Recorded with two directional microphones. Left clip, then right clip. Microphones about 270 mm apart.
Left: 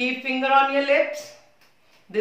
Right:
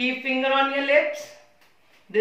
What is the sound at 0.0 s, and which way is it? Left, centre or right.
Speech, centre.